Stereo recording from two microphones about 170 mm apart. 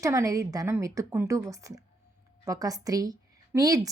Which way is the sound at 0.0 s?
20° right (ahead or behind).